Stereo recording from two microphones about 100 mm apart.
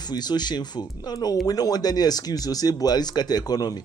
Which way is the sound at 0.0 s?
45° left (ahead or behind).